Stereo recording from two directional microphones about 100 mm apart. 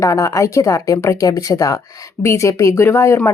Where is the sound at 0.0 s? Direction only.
30° left (ahead or behind).